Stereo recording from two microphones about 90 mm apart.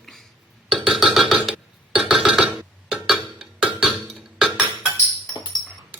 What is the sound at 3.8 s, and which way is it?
Music, 5° right (ahead or behind).